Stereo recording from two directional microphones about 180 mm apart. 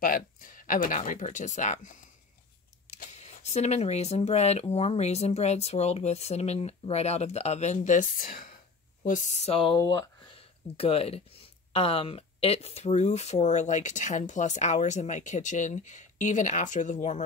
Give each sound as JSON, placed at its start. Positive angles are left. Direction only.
{"t": 0.0, "sound": "speech", "side_deg": 50}
{"t": 9.8, "sound": "speech", "side_deg": 20}
{"t": 10.3, "sound": "speech", "side_deg": 35}